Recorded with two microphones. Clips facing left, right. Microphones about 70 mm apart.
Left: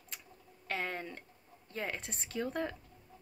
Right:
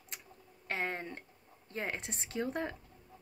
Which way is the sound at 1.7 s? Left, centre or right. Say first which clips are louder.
Right 1 dB; right.